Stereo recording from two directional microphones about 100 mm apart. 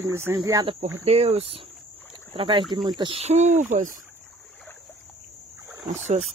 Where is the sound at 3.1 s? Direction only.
90° right.